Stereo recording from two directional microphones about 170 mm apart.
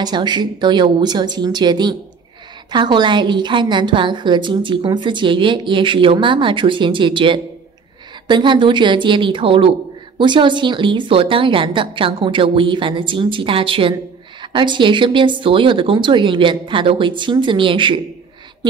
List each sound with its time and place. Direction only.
0.0 s a woman's voice: 25° right (ahead or behind)